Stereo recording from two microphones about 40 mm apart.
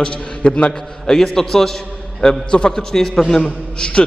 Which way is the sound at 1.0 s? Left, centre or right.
Centre.